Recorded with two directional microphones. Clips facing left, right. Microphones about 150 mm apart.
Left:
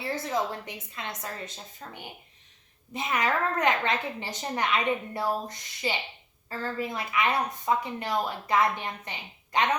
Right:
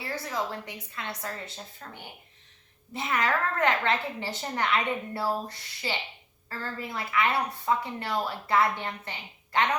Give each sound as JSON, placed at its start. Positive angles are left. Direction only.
{"t": 0.0, "sound": "a woman's voice", "side_deg": 20}